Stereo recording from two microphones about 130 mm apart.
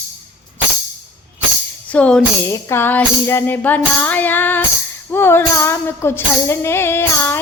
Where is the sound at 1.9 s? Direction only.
10° left (ahead or behind).